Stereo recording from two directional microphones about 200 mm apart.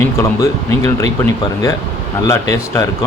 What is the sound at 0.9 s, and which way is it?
Speech, 15° left (ahead or behind).